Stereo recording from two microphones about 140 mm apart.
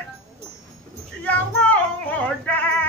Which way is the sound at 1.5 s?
10° left (ahead or behind).